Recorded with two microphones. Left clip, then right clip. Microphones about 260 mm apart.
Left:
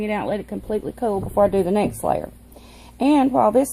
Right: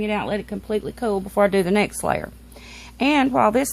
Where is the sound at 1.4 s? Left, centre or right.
Right.